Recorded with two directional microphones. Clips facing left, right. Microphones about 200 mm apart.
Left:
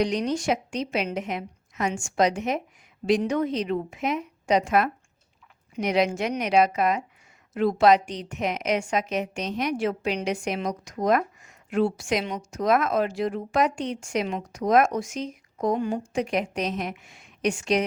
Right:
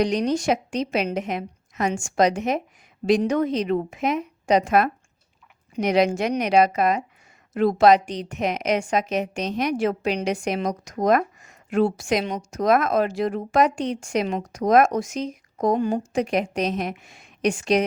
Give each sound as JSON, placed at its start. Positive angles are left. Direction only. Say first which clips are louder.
{"t": 0.0, "sound": "a woman's voice", "louder": "right 3 dB", "side_deg": -40}